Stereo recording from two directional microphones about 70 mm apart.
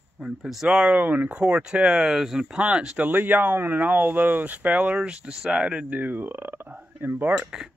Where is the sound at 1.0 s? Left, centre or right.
Right.